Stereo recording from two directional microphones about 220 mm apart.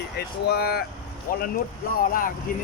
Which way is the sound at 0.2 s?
50° left (ahead or behind).